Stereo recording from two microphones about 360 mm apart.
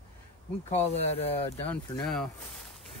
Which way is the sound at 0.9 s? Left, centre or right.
Centre.